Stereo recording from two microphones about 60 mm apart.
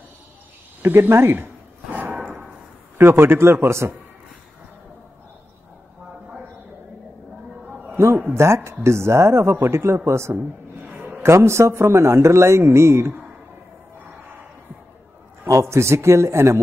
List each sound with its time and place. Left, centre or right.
0.8 s speech: right
1.9 s a sound: right
3.0 s a man's voice: right
7.7 s a sound: centre
8.4 s speech: right
15.4 s speech: right